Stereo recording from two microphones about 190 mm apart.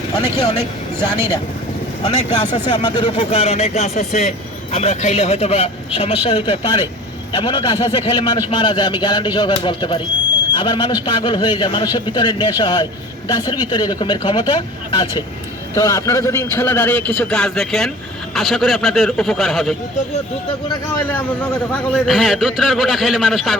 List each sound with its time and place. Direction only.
2.0 s a man's voice: 25° left (ahead or behind); by 19.7 s centre (ahead or behind)
21.1 s a man's voice: 5° left (ahead or behind)